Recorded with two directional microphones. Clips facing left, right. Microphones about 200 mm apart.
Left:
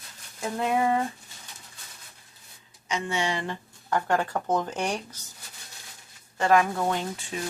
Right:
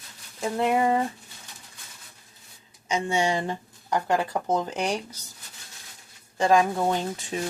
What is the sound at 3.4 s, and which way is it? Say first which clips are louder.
Speech: right 3 dB; 15° right (ahead or behind).